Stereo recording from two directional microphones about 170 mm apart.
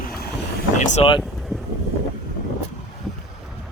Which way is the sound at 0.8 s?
45° left (ahead or behind).